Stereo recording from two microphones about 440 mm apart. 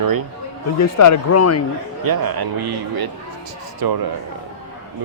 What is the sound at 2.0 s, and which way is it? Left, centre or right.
A man's voice, right.